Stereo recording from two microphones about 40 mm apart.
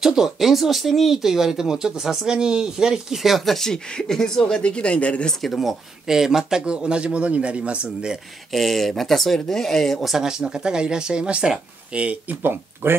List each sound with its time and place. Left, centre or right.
0.0 s speech: centre
3.2 s speech: centre; by 5.3 s left
5.3 s speech: centre
5.6 s speech: centre
6.6 s speech: right
8.5 s speech: centre
10.0 s speech: centre; by 12.2 s right
12.4 s speech: right